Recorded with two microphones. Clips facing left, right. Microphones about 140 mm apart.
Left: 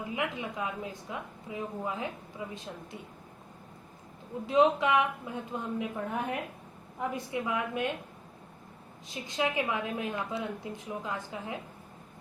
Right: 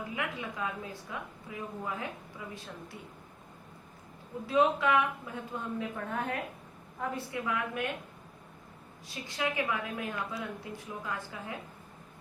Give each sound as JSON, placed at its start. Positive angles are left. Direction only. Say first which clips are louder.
{"t": 0.2, "sound": "a woman's voice", "louder": "left 2 dB", "side_deg": 20}
{"t": 4.4, "sound": "a woman's voice", "louder": "left 2 dB", "side_deg": 20}
{"t": 9.0, "sound": "a woman's voice", "louder": "left 3 dB", "side_deg": 20}